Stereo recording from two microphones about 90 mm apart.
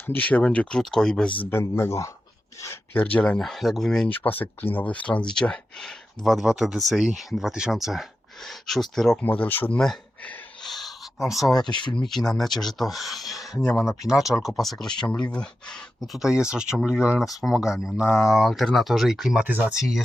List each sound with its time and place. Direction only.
0.0 s speech: 20° left (ahead or behind)
1.4 s speech: 25° left (ahead or behind)
2.9 s speech: 15° left (ahead or behind)
4.1 s speech: 20° left (ahead or behind); by 9.1 s 5° left (ahead or behind)
9.4 s speech: 20° left (ahead or behind)
10.6 s a sound: centre (ahead or behind)
11.6 s speech: 60° left (ahead or behind)
11.9 s speech: 5° left (ahead or behind)
16.2 s speech: 10° right (ahead or behind)
19.5 s speech: 20° right (ahead or behind)
19.7 s speech: 5° right (ahead or behind)